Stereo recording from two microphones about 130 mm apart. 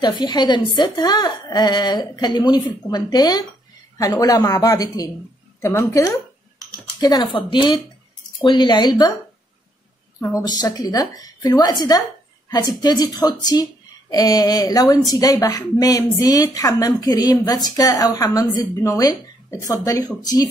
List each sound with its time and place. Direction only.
0.0 s a woman's voice: 35° left (ahead or behind)
7.0 s a woman's voice: 30° left (ahead or behind)
10.4 s a woman's voice: 30° left (ahead or behind)